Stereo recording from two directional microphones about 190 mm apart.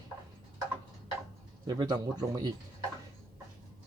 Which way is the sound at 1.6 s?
20° right (ahead or behind).